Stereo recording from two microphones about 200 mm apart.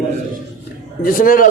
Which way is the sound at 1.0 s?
45° left (ahead or behind).